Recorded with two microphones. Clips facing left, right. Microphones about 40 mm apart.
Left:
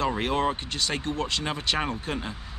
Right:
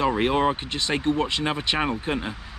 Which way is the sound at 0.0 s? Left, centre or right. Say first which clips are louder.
Right 4 dB; right.